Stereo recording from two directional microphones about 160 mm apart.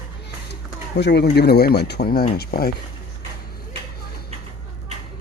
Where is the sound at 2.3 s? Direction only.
70° left (ahead or behind).